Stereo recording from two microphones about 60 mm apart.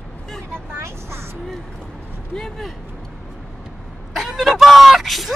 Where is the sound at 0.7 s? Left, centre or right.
Right.